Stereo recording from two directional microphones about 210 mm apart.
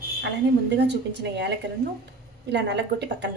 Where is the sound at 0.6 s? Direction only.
55° right (ahead or behind).